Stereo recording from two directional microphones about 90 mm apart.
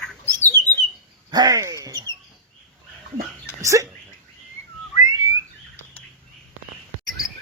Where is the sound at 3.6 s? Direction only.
35° right (ahead or behind).